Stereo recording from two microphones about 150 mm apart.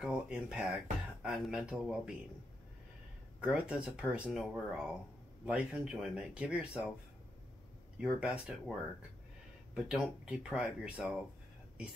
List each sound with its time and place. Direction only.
0.0 s speech: 5° right (ahead or behind)
3.3 s speech: 5° right (ahead or behind)
8.0 s speech: 5° right (ahead or behind)
9.8 s speech: 5° right (ahead or behind)